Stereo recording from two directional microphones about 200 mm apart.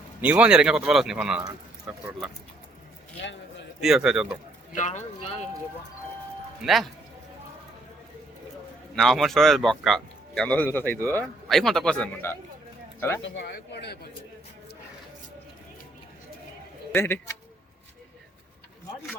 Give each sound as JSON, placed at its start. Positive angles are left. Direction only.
{"t": 0.2, "sound": "speech", "side_deg": -5}
{"t": 3.8, "sound": "speech", "side_deg": -5}
{"t": 4.7, "sound": "speech", "side_deg": 35}
{"t": 6.6, "sound": "speech", "side_deg": 0}
{"t": 9.0, "sound": "speech", "side_deg": 0}
{"t": 13.2, "sound": "speech", "side_deg": 60}
{"t": 16.9, "sound": "speech", "side_deg": 10}